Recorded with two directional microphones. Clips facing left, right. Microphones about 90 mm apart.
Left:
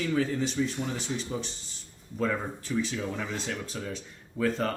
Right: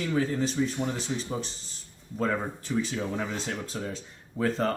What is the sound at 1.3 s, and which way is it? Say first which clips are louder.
Speech: right 1 dB; 35° right (ahead or behind).